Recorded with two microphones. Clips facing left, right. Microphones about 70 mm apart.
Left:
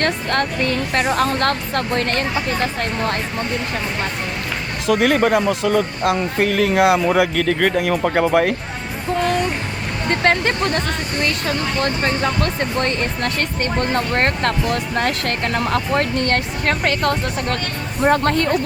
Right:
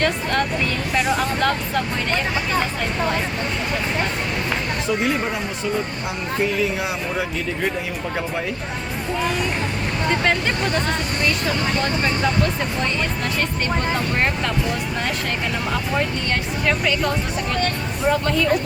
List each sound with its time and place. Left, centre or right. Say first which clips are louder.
0.0 s speech: left 1 dB; left
4.9 s speech: left 8 dB; left
10.1 s speech: left 4 dB; left
12.4 s speech: left 2 dB; left